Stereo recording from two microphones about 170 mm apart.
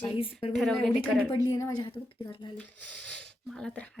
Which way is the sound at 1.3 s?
20° left (ahead or behind).